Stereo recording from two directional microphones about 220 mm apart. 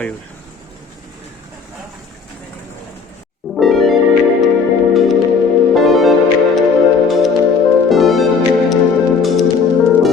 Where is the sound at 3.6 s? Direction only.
Centre (ahead or behind).